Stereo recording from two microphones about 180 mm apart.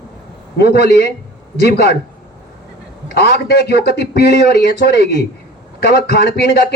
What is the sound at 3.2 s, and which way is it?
Speech, 60° left (ahead or behind).